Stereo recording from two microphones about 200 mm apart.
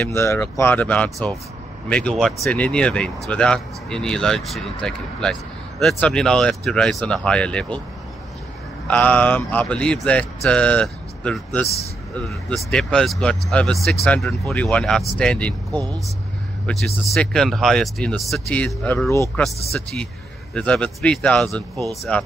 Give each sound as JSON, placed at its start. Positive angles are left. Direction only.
{"t": 0.0, "sound": "speech", "side_deg": 15}
{"t": 8.8, "sound": "speech", "side_deg": 5}
{"t": 15.7, "sound": "speech", "side_deg": -20}
{"t": 16.8, "sound": "speech", "side_deg": 0}
{"t": 20.5, "sound": "speech", "side_deg": 5}